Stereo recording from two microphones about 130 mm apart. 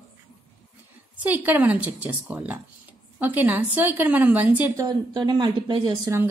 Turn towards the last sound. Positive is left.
turn(degrees=-35)  # may be behind; listen again after turning